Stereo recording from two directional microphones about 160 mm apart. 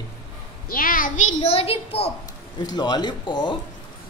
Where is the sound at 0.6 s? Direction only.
60° left (ahead or behind).